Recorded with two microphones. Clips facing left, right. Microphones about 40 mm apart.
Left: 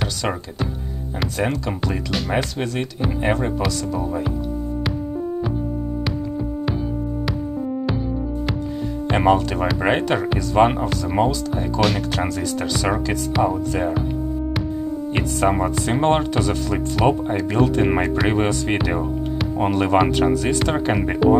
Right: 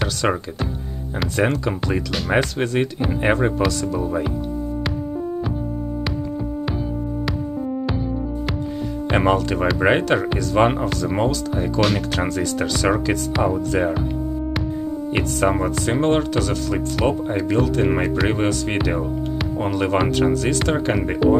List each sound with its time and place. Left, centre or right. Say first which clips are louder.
1.3 s speech: right 4 dB; centre
3.6 s speech: right 2 dB; centre
9.0 s speech: left 1 dB; centre
15.1 s speech: even; centre